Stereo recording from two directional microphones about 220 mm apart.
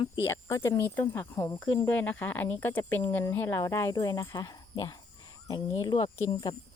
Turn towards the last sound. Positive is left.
turn(degrees=20)  # may be behind; listen again after turning